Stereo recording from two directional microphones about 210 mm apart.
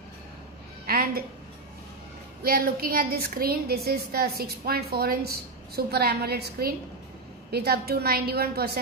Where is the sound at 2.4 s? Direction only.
45° right (ahead or behind).